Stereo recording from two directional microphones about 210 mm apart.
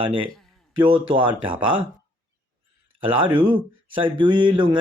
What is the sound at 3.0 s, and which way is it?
A man's voice, 25° right (ahead or behind).